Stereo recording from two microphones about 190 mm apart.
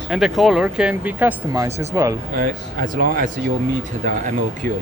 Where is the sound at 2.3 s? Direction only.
45° right (ahead or behind).